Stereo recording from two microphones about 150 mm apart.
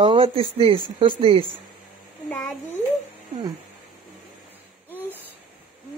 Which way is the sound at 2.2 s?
Centre (ahead or behind).